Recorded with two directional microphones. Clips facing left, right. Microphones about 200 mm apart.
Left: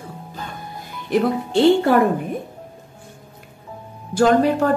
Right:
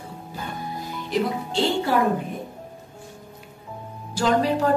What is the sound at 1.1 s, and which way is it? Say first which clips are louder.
Speech: left 6 dB; 55° left (ahead or behind).